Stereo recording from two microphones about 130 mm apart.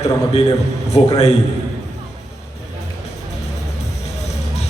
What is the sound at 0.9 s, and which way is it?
Speech, 50° left (ahead or behind).